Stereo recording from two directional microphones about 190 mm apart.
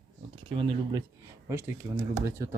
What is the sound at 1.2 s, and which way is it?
Speech, 15° right (ahead or behind).